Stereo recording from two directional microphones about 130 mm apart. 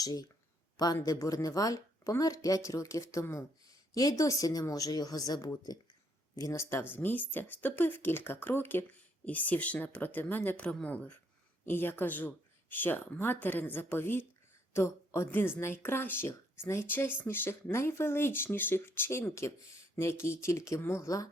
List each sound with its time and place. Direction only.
0.0 s speech: 30° left (ahead or behind)